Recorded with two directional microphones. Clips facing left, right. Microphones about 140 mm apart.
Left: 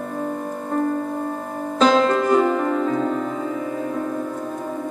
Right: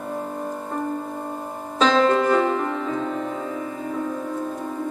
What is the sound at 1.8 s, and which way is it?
Music, 40° left (ahead or behind).